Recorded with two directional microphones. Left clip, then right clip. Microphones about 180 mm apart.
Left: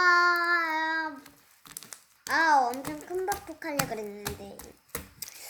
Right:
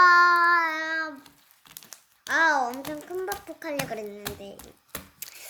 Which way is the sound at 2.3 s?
45° right (ahead or behind).